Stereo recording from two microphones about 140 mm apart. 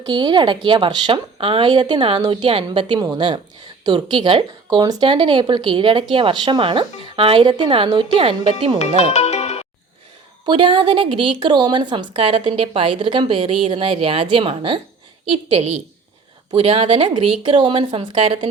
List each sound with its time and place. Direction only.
0.0 s a woman's voice: 35° right (ahead or behind)
9.0 s music: 50° left (ahead or behind)
10.4 s a woman's voice: 35° right (ahead or behind)